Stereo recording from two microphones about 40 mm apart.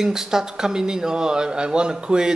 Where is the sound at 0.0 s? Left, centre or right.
Centre.